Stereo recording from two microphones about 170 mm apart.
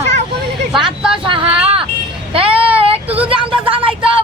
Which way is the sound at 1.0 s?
5° right (ahead or behind).